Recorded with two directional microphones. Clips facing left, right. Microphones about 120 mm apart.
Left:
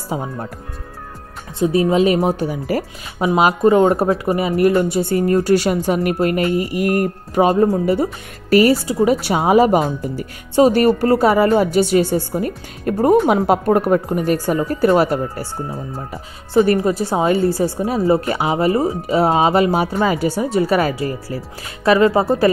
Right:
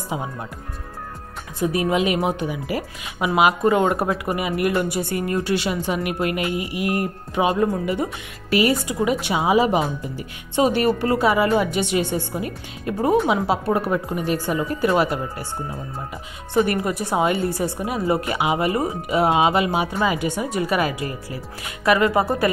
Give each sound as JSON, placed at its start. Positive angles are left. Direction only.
{"t": 0.1, "sound": "speech", "side_deg": 40}
{"t": 1.6, "sound": "a woman's voice", "side_deg": 30}
{"t": 16.6, "sound": "speech", "side_deg": 30}